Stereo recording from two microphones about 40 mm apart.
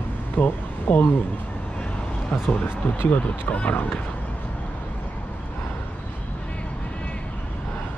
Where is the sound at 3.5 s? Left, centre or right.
Left.